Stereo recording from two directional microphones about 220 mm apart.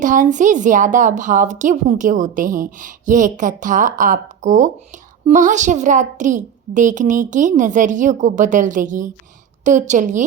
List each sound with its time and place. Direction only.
0.0 s a woman's voice: 35° right (ahead or behind)